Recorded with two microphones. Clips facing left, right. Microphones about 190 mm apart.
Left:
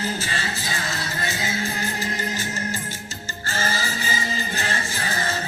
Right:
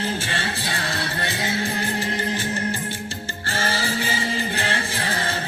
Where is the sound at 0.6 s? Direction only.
60° right (ahead or behind).